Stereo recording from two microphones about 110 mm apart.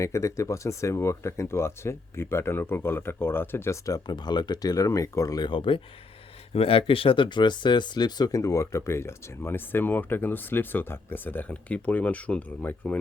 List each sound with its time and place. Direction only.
0.0 s speech: 25° left (ahead or behind)
5.5 s speech: 50° left (ahead or behind); by 13.0 s 15° left (ahead or behind)